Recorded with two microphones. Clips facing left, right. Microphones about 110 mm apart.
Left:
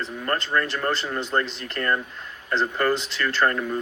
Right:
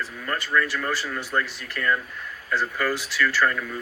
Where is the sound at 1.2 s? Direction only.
20° left (ahead or behind).